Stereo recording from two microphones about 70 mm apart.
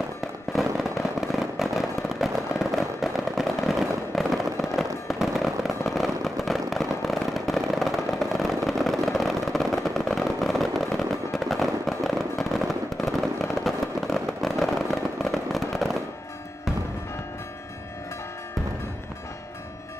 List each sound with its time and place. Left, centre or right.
0.5 s fireworks: centre